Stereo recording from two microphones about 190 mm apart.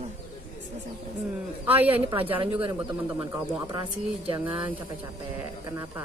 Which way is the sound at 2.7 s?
10° right (ahead or behind).